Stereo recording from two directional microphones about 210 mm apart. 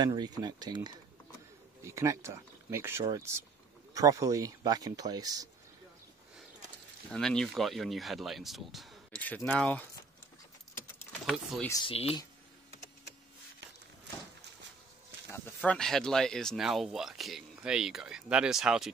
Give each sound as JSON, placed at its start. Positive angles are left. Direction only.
{"t": 0.0, "sound": "speech", "side_deg": -20}
{"t": 7.1, "sound": "speech", "side_deg": 5}
{"t": 11.2, "sound": "speech", "side_deg": 0}
{"t": 11.7, "sound": "speech", "side_deg": 25}
{"t": 15.3, "sound": "speech", "side_deg": 5}